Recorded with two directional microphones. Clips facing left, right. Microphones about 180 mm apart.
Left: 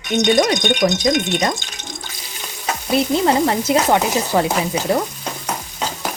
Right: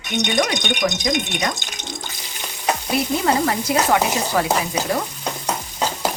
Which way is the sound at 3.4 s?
25° left (ahead or behind).